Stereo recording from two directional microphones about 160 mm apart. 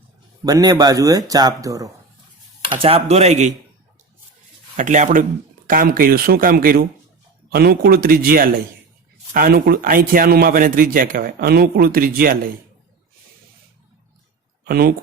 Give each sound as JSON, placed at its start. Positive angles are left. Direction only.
{"t": 0.4, "sound": "speech", "side_deg": -20}
{"t": 2.7, "sound": "speech", "side_deg": -35}
{"t": 4.8, "sound": "speech", "side_deg": -50}
{"t": 5.6, "sound": "a man's voice", "side_deg": -60}
{"t": 14.6, "sound": "speech", "side_deg": -75}